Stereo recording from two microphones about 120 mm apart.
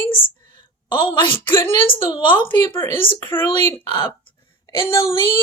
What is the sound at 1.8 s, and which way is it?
Speech, 45° left (ahead or behind).